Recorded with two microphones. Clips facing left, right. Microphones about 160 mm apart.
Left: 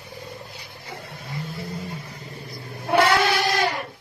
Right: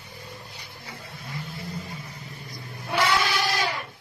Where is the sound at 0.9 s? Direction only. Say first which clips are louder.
Left 4 dB; 60° left (ahead or behind).